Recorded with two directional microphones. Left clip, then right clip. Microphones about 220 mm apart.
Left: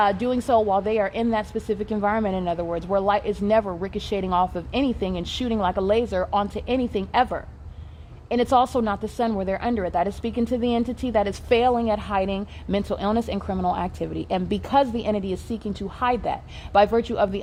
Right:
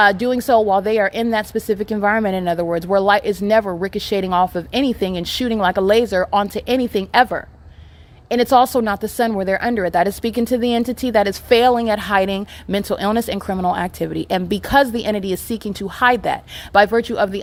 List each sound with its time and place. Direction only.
0.0 s speech: 25° right (ahead or behind)